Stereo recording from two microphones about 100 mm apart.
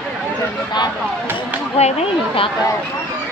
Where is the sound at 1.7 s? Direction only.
80° left.